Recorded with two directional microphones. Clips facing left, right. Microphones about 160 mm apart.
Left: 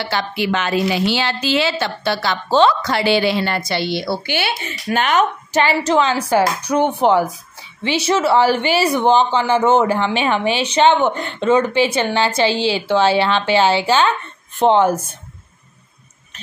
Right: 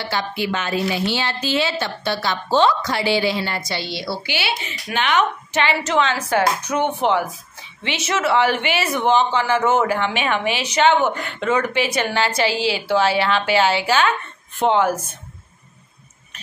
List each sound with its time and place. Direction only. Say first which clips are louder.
0.1 s a woman's voice: left 2 dB; 80° left; by 15.0 s 30° left (ahead or behind)